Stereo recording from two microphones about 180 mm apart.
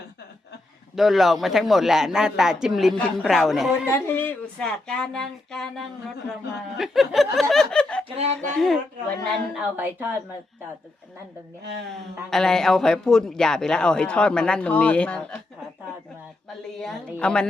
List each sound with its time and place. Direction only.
0.9 s a man's voice: centre (ahead or behind)
3.9 s a man's voice: 15° left (ahead or behind)
7.5 s chuckle: 5° left (ahead or behind)
8.0 s speech: 35° right (ahead or behind)
8.4 s a man's voice: centre (ahead or behind)
11.6 s speech: 70° right (ahead or behind)
12.3 s a man's voice: 5° left (ahead or behind)
17.2 s a man's voice: 5° left (ahead or behind)